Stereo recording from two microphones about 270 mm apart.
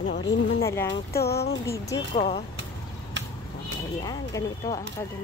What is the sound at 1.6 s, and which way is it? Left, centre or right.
Speech, centre.